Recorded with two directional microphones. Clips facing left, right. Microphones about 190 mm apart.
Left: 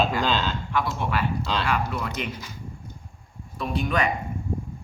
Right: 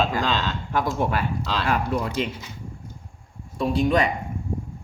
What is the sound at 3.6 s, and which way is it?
Speech, 30° right (ahead or behind).